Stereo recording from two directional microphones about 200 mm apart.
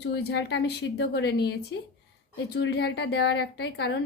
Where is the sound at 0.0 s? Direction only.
55° left (ahead or behind).